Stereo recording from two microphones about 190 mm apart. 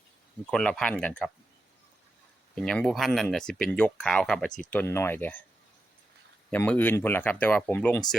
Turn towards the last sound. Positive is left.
turn(degrees=10)  # may be behind; listen again after turning